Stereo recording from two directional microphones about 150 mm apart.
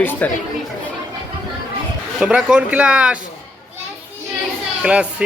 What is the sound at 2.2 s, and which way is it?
Speech, 5° right (ahead or behind).